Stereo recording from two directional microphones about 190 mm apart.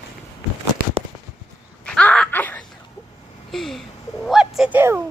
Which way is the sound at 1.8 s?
5° left (ahead or behind).